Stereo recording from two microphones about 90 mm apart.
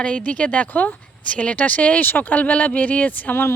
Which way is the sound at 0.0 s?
15° left (ahead or behind).